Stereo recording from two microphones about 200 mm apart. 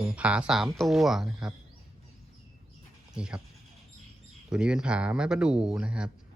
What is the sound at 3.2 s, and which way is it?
Speech, 5° right (ahead or behind).